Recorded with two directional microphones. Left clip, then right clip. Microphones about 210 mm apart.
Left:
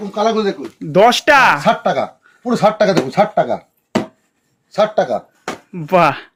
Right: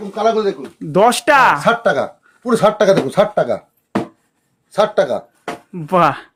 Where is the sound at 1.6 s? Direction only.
20° right (ahead or behind).